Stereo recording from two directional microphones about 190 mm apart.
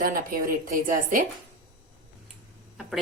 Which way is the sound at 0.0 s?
50° right (ahead or behind).